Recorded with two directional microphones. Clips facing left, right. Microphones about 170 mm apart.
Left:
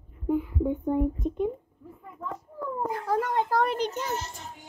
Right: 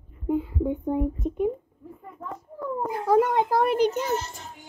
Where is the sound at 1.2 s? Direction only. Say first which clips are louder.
Right 1 dB; 5° right (ahead or behind).